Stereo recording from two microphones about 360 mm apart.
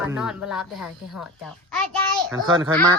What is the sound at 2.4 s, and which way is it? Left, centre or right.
Speech, centre.